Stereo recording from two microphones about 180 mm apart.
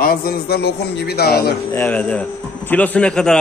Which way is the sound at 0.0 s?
55° left (ahead or behind).